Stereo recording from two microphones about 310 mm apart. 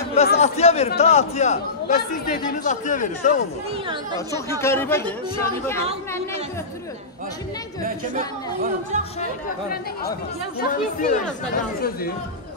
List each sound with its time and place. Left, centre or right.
0.1 s a man's voice: left
3.8 s speech: centre
4.5 s speech: centre
8.9 s speech: right
10.6 s a man's voice: left